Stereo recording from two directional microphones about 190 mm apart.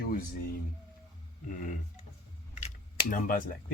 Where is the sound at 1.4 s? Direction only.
45° left (ahead or behind).